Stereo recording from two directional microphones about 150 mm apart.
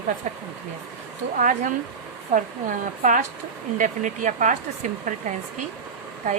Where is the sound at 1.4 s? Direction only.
60° right (ahead or behind).